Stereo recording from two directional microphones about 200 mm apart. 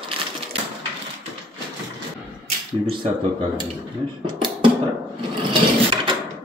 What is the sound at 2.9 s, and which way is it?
Speech, 25° right (ahead or behind).